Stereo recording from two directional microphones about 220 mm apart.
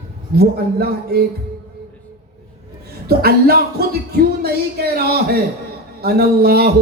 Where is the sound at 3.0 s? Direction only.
45° right (ahead or behind).